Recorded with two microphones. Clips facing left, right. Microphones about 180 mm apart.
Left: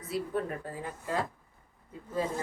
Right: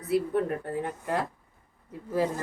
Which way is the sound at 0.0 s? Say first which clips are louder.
Right 7 dB; 65° right (ahead or behind).